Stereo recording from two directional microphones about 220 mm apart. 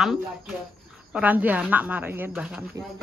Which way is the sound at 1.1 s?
5° right (ahead or behind).